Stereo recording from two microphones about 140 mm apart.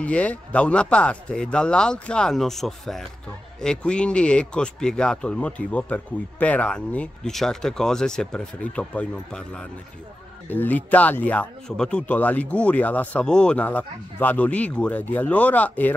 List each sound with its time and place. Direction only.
0.0 s speech: 10° left (ahead or behind)